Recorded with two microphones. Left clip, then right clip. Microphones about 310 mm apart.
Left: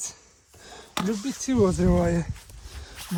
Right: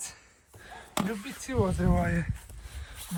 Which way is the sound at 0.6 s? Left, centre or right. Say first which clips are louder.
Left 1 dB; centre.